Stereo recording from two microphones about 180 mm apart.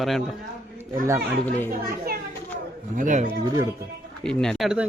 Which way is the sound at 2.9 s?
45° right (ahead or behind).